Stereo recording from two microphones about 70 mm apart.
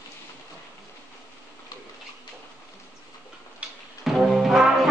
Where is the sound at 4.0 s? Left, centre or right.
Centre.